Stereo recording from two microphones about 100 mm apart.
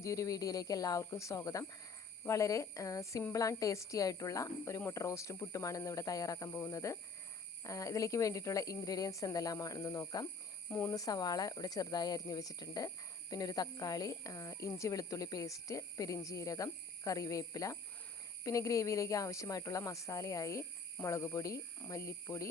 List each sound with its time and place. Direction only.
0.0 s speech: 35° left (ahead or behind)
10.7 s speech: 20° left (ahead or behind)
10.9 s speech: 40° left (ahead or behind)